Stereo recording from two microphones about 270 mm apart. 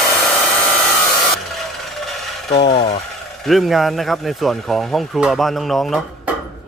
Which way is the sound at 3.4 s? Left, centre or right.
Centre.